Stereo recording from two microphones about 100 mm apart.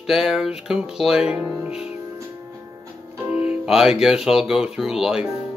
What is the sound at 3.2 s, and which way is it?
Music, 15° right (ahead or behind).